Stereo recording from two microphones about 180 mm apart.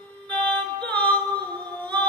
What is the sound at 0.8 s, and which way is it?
Singing, 10° left (ahead or behind).